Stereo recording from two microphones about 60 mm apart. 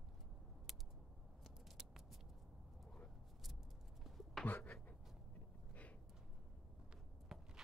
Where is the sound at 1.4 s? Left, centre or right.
Centre.